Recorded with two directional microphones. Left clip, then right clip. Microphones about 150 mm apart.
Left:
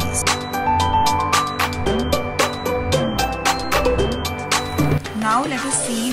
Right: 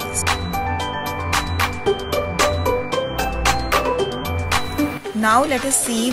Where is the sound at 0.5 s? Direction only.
Centre (ahead or behind).